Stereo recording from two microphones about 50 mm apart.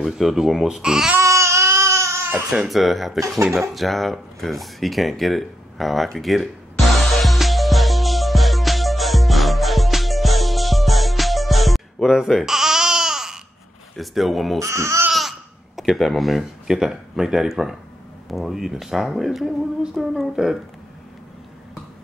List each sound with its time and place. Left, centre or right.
0.0 s speech: centre
1.2 s baby cry: right
2.7 s speech: centre
3.7 s a sound: centre
12.1 s babbling: centre
13.9 s speech: centre
14.6 s speech: right
15.1 s babbling: centre
16.0 s speech: centre